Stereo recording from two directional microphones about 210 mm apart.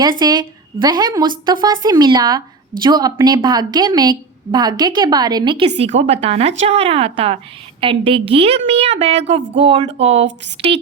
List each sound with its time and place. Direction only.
0.0 s a woman's voice: 20° right (ahead or behind)